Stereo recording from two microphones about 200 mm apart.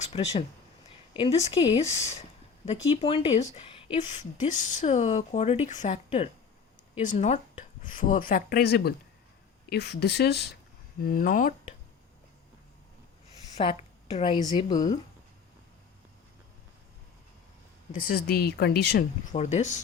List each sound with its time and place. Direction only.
0.0 s a woman's voice: 30° left (ahead or behind)
2.9 s a woman's voice: 30° left (ahead or behind)
13.6 s a woman's voice: 30° left (ahead or behind)
17.9 s speech: 45° left (ahead or behind)
19.3 s speech: 35° left (ahead or behind)